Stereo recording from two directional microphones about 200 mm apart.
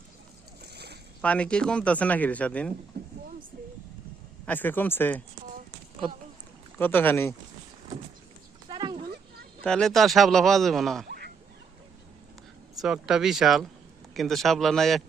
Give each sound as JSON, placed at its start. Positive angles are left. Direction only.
{"t": 0.6, "sound": "boat", "side_deg": -55}
{"t": 1.2, "sound": "a man's voice", "side_deg": 5}
{"t": 3.0, "sound": "vehicle", "side_deg": -55}
{"t": 4.4, "sound": "a man's voice", "side_deg": 10}
{"t": 6.7, "sound": "a man's voice", "side_deg": 10}
{"t": 8.7, "sound": "a sound", "side_deg": -20}
{"t": 9.6, "sound": "speech", "side_deg": 5}
{"t": 12.8, "sound": "speech", "side_deg": 0}